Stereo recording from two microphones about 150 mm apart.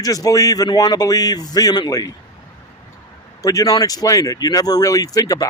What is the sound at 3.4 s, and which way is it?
Speech, 20° left (ahead or behind).